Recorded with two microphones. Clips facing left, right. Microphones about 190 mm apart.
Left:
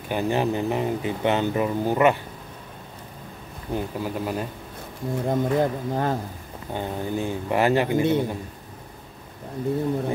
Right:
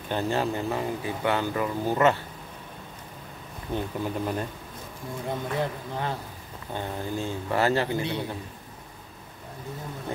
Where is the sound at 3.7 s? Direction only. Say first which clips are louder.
Left 2 dB; 5° left (ahead or behind).